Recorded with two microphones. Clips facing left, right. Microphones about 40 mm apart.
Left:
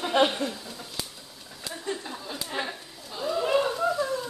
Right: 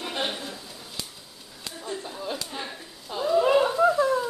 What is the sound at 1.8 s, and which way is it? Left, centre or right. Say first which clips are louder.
Speech: left 1 dB; centre.